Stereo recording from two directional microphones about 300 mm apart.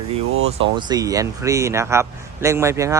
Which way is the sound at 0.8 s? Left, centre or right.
Centre.